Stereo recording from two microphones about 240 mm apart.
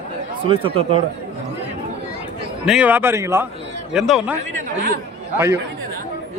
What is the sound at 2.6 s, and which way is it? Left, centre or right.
A man's voice, centre.